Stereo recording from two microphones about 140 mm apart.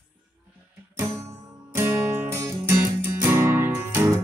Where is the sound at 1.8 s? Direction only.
15° right (ahead or behind).